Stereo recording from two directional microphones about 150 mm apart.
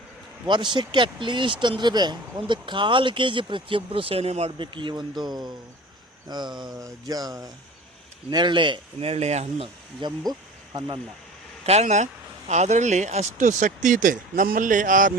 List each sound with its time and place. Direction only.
0.4 s speech: 30° right (ahead or behind); by 9.6 s 45° right (ahead or behind)
10.0 s speech: 30° right (ahead or behind)
11.6 s speech: 45° right (ahead or behind)